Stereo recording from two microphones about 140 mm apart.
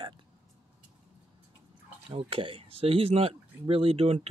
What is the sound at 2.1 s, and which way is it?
Speech, 40° right (ahead or behind).